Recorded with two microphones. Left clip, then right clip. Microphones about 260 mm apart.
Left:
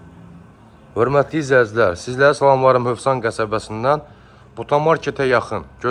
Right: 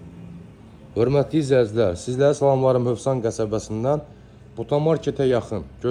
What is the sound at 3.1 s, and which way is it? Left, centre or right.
Speech, left.